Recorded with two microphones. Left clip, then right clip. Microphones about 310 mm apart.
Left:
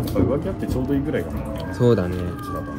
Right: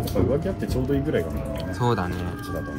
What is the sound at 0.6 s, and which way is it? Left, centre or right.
Speech, right.